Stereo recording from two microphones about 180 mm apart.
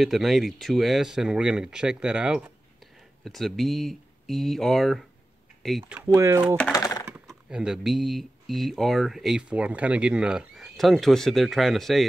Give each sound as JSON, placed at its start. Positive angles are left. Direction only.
{"t": 0.0, "sound": "speech", "side_deg": 0}
{"t": 5.9, "sound": "speech", "side_deg": -15}
{"t": 6.7, "sound": "computer keyboard", "side_deg": 20}
{"t": 7.2, "sound": "speech", "side_deg": -5}